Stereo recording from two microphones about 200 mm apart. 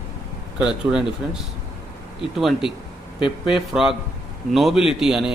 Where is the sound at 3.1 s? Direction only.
25° left (ahead or behind).